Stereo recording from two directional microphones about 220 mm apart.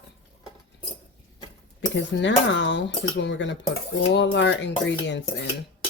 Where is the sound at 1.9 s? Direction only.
55° left (ahead or behind).